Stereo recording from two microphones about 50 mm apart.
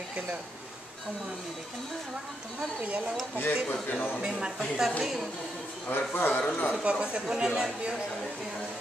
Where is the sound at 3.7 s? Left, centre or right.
Left.